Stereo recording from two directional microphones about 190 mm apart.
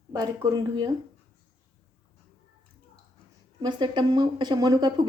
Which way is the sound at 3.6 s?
25° right (ahead or behind).